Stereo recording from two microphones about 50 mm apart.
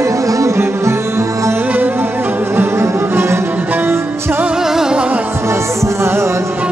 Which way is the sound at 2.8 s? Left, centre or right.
Right.